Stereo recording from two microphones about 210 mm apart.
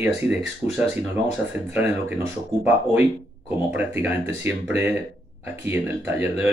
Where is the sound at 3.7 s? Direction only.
10° right (ahead or behind).